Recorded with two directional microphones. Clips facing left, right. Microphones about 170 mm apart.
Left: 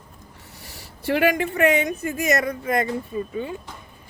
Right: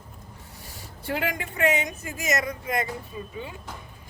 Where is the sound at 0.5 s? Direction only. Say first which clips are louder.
Left 1 dB; 80° left; by 3.3 s 50° left (ahead or behind).